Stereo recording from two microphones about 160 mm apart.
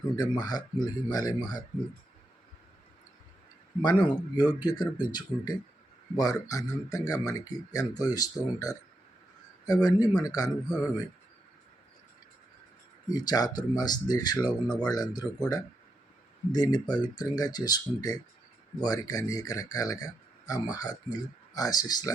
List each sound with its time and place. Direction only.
0.2 s speech: 25° left (ahead or behind)
3.8 s speech: 25° left (ahead or behind)
13.1 s speech: 25° left (ahead or behind)